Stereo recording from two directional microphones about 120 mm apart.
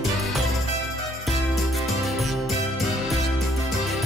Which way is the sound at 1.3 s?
Centre (ahead or behind).